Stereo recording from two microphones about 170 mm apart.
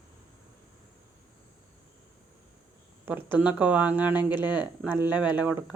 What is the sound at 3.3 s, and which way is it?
Speech, 10° right (ahead or behind).